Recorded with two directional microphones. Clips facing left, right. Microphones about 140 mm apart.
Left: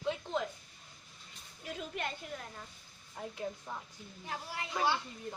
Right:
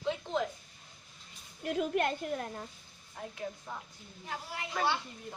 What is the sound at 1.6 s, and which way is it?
Speech, 55° right (ahead or behind).